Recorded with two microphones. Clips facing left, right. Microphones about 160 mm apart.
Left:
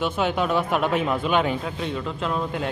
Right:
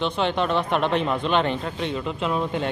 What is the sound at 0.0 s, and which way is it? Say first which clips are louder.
A man's voice: even; 5° left (ahead or behind).